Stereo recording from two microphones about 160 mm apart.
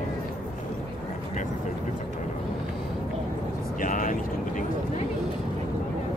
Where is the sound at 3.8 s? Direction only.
55° left (ahead or behind).